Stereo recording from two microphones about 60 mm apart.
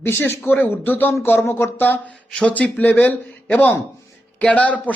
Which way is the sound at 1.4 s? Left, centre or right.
Left.